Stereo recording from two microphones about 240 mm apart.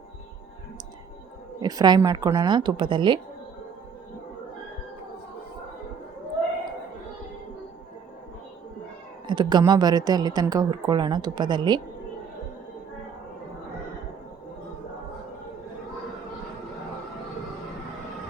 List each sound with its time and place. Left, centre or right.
1.6 s a woman's voice: centre
9.2 s a woman's voice: centre